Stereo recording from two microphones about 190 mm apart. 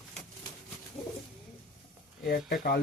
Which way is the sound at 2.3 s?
55° left (ahead or behind).